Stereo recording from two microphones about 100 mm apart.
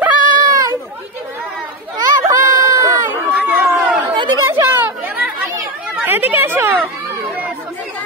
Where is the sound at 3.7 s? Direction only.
Centre (ahead or behind).